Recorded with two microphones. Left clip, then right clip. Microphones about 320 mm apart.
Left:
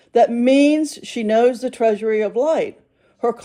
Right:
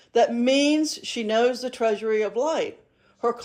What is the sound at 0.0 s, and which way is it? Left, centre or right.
Speech, left.